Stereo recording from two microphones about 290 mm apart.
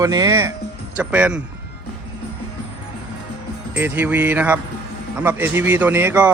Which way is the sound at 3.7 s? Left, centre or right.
Centre.